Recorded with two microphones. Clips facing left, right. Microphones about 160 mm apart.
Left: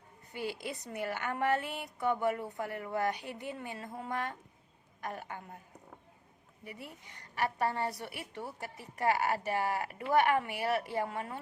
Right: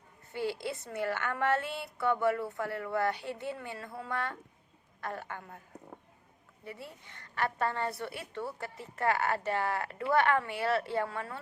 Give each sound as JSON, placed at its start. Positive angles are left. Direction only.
{"t": 0.3, "sound": "a woman's voice", "side_deg": 15}
{"t": 6.7, "sound": "a woman's voice", "side_deg": 15}